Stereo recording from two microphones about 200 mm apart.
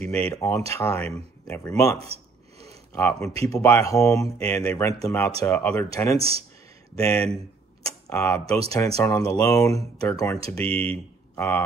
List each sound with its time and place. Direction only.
0.0 s speech: 5° left (ahead or behind)
6.1 s speech: 30° right (ahead or behind)
7.0 s speech: 15° left (ahead or behind)